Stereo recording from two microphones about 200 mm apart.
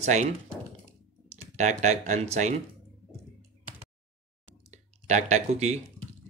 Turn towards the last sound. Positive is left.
turn(degrees=-35)  # may be behind; listen again after turning